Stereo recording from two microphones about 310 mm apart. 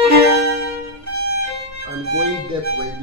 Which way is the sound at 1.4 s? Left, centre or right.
Right.